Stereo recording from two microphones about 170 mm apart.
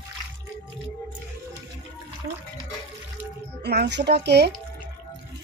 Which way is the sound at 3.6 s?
80° right.